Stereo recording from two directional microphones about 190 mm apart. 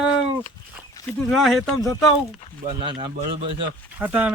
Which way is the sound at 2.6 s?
25° right (ahead or behind).